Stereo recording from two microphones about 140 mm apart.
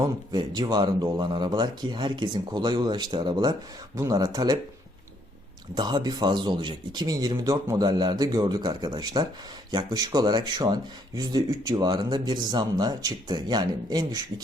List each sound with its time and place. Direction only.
0.0 s speech: 30° right (ahead or behind)
5.7 s speech: 30° right (ahead or behind)